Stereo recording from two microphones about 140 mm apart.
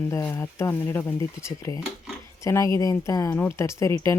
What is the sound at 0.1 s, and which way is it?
Speech, 20° left (ahead or behind).